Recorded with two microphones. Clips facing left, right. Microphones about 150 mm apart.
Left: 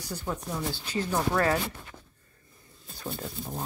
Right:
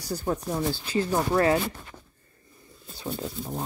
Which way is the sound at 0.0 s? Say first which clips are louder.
Right 6 dB; 35° right (ahead or behind).